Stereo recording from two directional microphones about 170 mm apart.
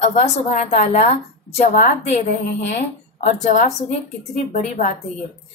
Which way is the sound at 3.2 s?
45° left (ahead or behind).